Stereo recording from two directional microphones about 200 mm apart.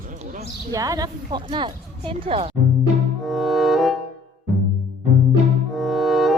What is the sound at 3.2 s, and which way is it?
Music, centre (ahead or behind).